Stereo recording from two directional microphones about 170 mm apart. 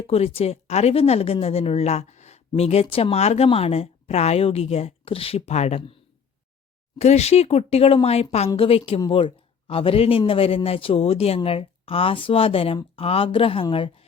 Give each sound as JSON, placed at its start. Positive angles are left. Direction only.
{"t": 0.1, "sound": "speech", "side_deg": 35}
{"t": 7.0, "sound": "speech", "side_deg": 40}